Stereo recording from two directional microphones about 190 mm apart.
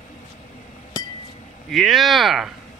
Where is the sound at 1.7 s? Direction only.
Centre (ahead or behind).